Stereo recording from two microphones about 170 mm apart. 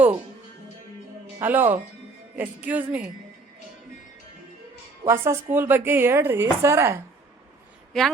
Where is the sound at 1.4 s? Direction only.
10° right (ahead or behind).